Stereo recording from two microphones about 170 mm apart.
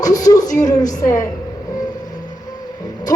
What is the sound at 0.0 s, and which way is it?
A woman's voice, 20° left (ahead or behind).